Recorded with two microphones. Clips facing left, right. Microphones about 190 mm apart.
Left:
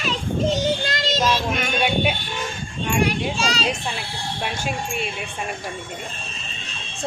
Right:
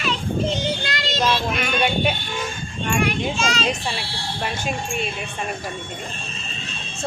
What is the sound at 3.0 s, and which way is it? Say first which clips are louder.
Speech: even; 35° left (ahead or behind).